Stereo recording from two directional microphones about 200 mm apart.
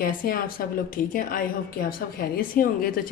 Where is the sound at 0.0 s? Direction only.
45° left (ahead or behind).